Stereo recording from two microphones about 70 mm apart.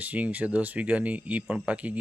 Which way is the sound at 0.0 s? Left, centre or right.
Right.